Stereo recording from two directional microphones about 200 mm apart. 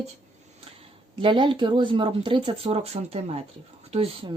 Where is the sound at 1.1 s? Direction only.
25° right (ahead or behind).